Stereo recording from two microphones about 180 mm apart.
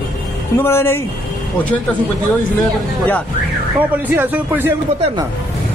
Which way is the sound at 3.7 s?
10° right (ahead or behind).